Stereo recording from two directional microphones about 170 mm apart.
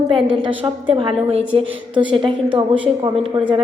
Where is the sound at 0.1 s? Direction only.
30° right (ahead or behind).